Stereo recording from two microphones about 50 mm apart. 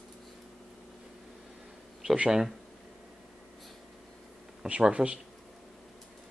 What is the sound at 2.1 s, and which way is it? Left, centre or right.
Speech, centre.